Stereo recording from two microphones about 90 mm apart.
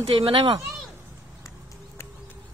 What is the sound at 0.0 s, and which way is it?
Speech, 80° right.